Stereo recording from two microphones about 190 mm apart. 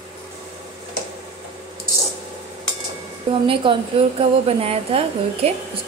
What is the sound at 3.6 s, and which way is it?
A woman's voice, 25° right (ahead or behind).